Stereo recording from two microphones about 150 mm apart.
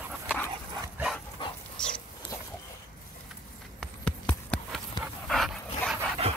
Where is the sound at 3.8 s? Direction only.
5° left (ahead or behind).